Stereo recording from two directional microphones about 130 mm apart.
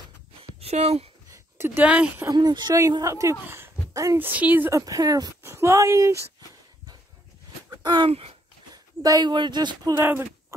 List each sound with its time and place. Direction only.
0.6 s speech: 55° right (ahead or behind)
1.3 s speech: 15° right (ahead or behind)
2.3 s speech: 35° right (ahead or behind)
4.3 s speech: 10° right (ahead or behind)
4.7 s speech: 30° right (ahead or behind)
7.7 s a sound: 35° right (ahead or behind)
8.1 s speech: 50° right (ahead or behind)
8.7 s speech: 30° right (ahead or behind)
9.9 s speech: 15° right (ahead or behind)